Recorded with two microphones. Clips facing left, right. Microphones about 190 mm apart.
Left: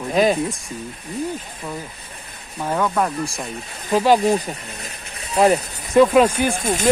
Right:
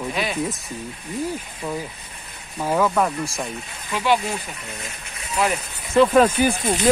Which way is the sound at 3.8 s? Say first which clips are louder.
Left 6 dB; 40° left (ahead or behind).